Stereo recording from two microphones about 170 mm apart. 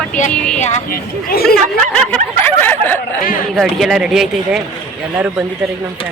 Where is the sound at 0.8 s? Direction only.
60° left (ahead or behind).